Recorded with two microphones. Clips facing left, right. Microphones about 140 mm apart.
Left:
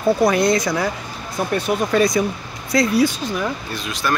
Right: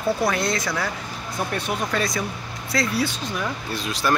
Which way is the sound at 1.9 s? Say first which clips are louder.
Left 8 dB; 15° left (ahead or behind).